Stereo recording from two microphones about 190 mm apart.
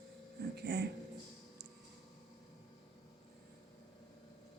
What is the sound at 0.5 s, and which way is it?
Speech, 60° right (ahead or behind).